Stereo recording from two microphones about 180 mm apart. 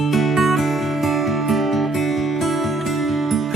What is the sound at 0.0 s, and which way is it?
Music, centre (ahead or behind).